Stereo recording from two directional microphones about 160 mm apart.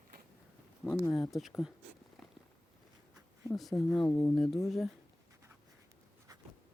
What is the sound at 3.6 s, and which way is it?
Speech, centre (ahead or behind).